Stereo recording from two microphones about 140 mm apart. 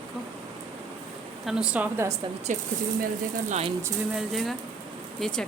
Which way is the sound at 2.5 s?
60° right (ahead or behind).